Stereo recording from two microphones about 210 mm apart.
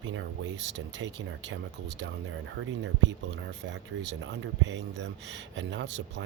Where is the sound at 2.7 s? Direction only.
60° right (ahead or behind).